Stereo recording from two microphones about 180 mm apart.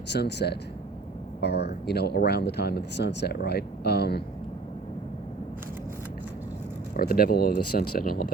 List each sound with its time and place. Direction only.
0.1 s speech: 70° left (ahead or behind)
6.9 s speech: 55° left (ahead or behind)